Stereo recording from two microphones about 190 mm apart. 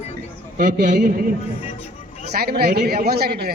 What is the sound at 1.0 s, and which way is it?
Music, 50° right (ahead or behind).